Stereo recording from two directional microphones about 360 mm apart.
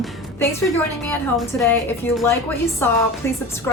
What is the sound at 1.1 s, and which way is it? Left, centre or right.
A woman's voice, centre.